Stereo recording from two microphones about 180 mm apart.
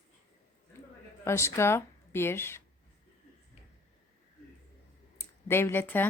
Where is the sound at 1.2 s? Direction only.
15° left (ahead or behind).